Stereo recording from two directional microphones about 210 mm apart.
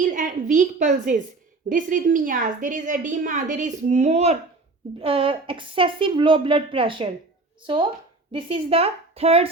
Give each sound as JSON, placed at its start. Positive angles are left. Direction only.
{"t": 0.0, "sound": "a woman's voice", "side_deg": -40}
{"t": 8.3, "sound": "a woman's voice", "side_deg": -25}